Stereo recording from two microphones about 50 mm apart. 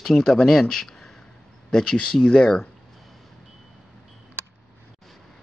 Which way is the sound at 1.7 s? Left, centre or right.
Left.